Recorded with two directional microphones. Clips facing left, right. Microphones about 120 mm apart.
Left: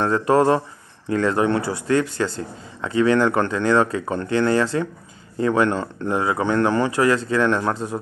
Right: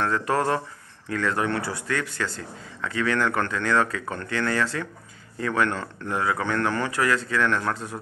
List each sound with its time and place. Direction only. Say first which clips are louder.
0.0 s speech: left 7 dB; 25° left (ahead or behind)